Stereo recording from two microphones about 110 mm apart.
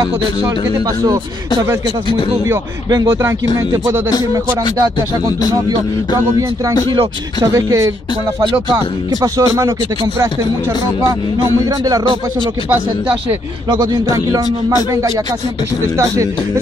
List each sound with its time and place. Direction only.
3.1 s speech: 25° right (ahead or behind)
6.9 s speech: 45° right (ahead or behind)
7.5 s speech: 30° right (ahead or behind)
13.7 s speech: 35° right (ahead or behind)